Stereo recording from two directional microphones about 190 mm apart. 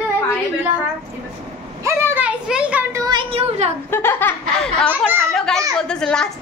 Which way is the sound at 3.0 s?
25° right (ahead or behind).